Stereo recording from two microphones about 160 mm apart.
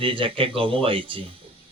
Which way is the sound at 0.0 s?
35° right (ahead or behind).